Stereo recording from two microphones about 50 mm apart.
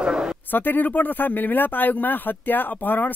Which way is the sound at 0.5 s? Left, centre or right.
Left.